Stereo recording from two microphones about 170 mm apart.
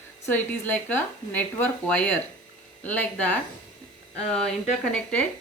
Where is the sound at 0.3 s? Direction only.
10° left (ahead or behind).